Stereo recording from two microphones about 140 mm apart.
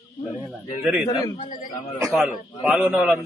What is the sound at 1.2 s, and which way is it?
Speech, 35° left (ahead or behind).